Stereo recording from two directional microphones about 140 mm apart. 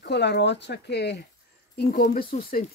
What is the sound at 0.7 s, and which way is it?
Speech, 90° left.